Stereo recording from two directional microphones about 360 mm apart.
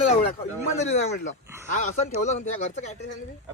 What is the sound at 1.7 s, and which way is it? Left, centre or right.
Speech, centre.